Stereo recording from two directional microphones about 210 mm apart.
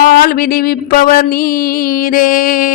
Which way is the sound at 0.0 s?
45° left (ahead or behind).